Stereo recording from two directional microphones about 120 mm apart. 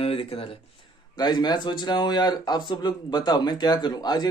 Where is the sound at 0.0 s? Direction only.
55° left (ahead or behind).